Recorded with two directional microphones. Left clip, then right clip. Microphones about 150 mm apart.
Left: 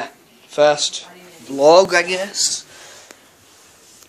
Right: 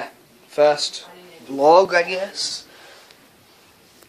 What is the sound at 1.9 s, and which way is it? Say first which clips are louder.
Speech: left 2 dB; 20° left (ahead or behind).